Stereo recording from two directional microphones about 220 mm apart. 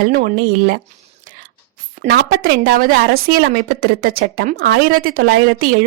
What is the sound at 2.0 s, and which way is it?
A woman's voice, 45° right (ahead or behind).